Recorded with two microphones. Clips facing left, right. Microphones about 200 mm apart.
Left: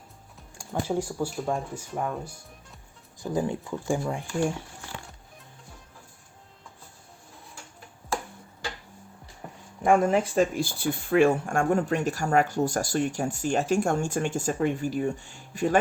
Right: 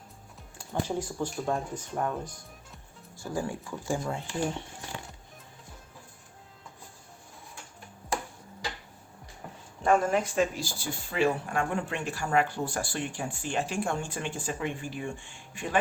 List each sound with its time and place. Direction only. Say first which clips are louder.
0.6 s speech: left 3 dB; 10° left (ahead or behind)
3.2 s speech: left 5 dB; 20° left (ahead or behind)
9.8 s speech: left 3 dB; 20° left (ahead or behind)
10.3 s speech: left 4 dB; 55° left (ahead or behind)